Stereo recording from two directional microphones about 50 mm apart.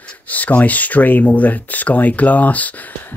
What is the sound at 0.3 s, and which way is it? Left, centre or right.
Speech, left.